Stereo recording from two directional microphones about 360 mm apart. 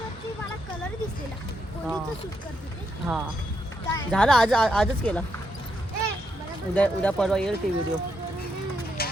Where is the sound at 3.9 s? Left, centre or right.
Centre.